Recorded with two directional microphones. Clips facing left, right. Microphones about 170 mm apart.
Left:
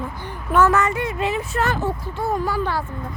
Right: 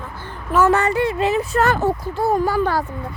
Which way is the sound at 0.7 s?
35° right (ahead or behind).